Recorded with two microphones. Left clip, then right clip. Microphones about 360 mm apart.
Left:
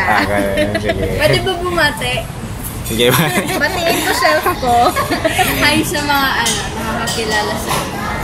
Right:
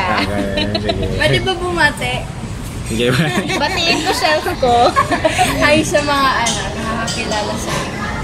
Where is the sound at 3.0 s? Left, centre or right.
Centre.